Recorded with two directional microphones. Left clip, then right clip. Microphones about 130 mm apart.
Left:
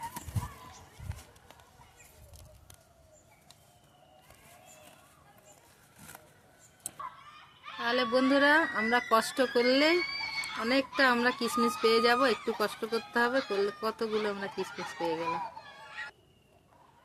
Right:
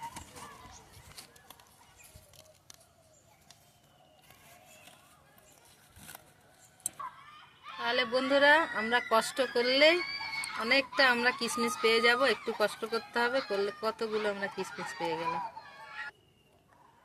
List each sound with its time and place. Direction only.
7.6 s fowl: centre (ahead or behind)
7.9 s a woman's voice: 20° left (ahead or behind)
10.0 s fowl: 5° left (ahead or behind)
10.6 s a woman's voice: 20° left (ahead or behind)
12.9 s speech: centre (ahead or behind)
13.8 s speech: 15° left (ahead or behind)
15.3 s fowl: 5° left (ahead or behind)